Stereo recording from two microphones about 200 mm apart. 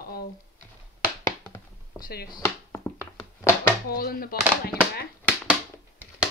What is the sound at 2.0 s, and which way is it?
Speech, 45° left (ahead or behind).